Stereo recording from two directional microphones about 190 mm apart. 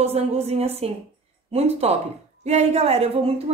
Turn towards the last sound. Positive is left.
turn(degrees=-30)  # may be behind; listen again after turning